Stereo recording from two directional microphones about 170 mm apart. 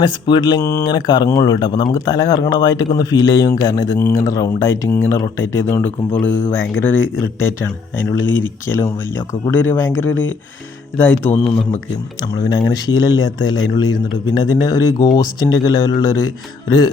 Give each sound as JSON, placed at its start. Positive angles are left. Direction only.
{"t": 0.0, "sound": "speech", "side_deg": 25}
{"t": 11.3, "sound": "speech", "side_deg": 35}
{"t": 12.3, "sound": "speech", "side_deg": 25}